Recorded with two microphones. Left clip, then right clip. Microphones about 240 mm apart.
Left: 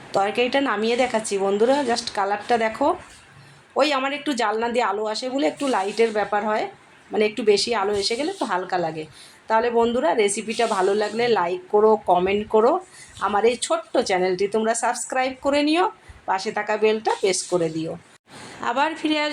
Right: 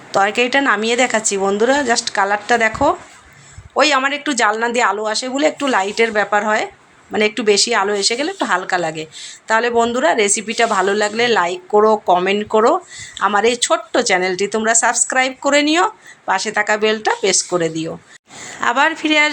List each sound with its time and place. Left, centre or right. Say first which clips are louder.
0.1 s a woman's voice: right 6 dB; centre